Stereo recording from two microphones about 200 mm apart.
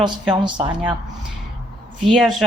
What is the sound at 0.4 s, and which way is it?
Speech, 25° right (ahead or behind).